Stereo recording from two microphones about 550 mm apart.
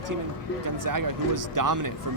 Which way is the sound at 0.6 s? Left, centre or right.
Right.